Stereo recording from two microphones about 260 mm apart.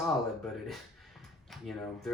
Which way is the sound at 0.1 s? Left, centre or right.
Centre.